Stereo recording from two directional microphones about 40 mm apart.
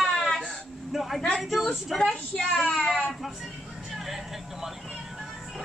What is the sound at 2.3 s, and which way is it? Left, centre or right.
Speech, left.